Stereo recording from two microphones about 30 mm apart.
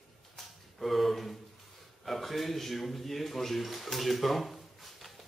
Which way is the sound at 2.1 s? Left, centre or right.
Centre.